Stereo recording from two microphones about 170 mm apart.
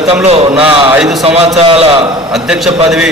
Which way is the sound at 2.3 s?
Centre (ahead or behind).